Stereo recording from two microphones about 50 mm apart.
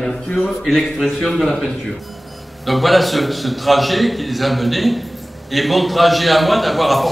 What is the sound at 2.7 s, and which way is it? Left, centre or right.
A man's voice, centre.